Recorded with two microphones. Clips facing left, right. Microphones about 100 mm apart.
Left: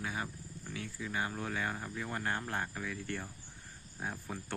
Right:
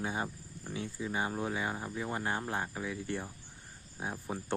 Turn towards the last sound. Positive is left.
turn(degrees=-20)  # may be behind; listen again after turning